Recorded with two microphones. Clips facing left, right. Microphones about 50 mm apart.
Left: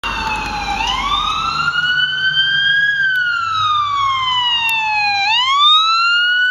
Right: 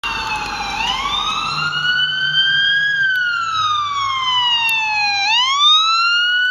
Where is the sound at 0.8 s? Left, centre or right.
Centre.